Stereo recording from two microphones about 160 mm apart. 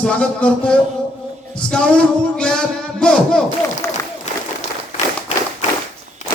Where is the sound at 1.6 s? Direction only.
5° left (ahead or behind).